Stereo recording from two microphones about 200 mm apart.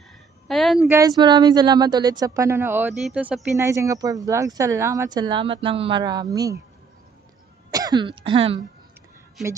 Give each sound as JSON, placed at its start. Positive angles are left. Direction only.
{"t": 0.5, "sound": "a sound", "side_deg": 0}
{"t": 0.8, "sound": "speech", "side_deg": -15}
{"t": 7.7, "sound": "speech", "side_deg": -20}